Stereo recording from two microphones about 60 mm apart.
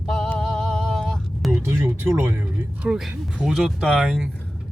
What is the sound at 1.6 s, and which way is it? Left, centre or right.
Speech, right.